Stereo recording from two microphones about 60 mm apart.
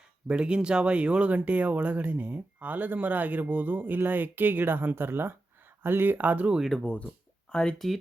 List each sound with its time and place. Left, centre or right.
0.3 s speech: centre
6.6 s speech: centre
6.8 s speech: left
7.5 s speech: centre